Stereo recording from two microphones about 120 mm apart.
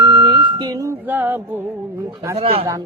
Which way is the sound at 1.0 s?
15° right (ahead or behind).